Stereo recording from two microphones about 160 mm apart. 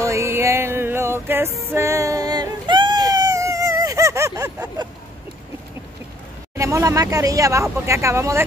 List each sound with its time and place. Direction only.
0.0 s music: 20° right (ahead or behind)
6.5 s speech: 20° right (ahead or behind)